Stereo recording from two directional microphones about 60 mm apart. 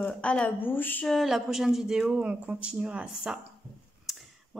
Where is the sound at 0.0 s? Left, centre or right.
Left.